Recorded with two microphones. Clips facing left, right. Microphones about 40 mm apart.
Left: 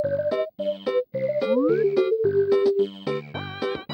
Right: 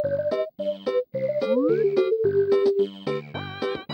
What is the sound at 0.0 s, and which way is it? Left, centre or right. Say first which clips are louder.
Music: left 1 dB; left.